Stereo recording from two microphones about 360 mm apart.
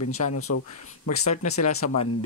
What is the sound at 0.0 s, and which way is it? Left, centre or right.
Speech, left.